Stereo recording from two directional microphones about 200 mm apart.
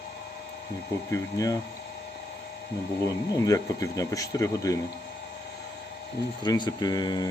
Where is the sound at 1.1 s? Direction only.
15° left (ahead or behind).